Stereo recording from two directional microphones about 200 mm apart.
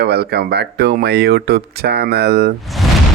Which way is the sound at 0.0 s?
55° right (ahead or behind).